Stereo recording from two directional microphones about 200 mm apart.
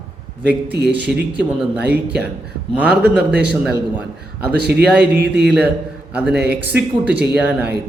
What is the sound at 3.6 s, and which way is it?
Speech, 5° right (ahead or behind).